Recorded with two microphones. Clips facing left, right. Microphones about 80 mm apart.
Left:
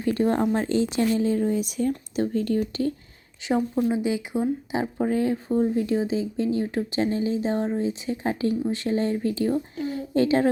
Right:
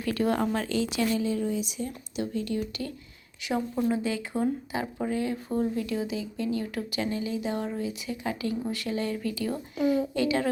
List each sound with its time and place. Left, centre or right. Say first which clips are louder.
0.0 s speech: left 4 dB; left
3.4 s a woman's voice: left 5 dB; left
3.8 s speech: left 4 dB; centre
5.0 s a woman's voice: left 6 dB; left